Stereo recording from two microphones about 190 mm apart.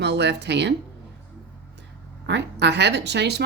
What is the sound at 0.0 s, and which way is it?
Speech, 65° right (ahead or behind).